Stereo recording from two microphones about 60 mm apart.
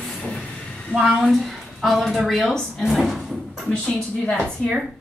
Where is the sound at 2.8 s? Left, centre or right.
Centre.